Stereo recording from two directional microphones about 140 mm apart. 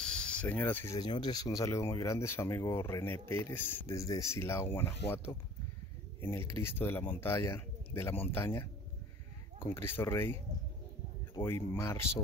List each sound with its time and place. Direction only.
0.0 s cricket: 5° left (ahead or behind)
0.9 s speech: 30° left (ahead or behind)
9.8 s speech: 15° left (ahead or behind)
11.4 s speech: 15° left (ahead or behind)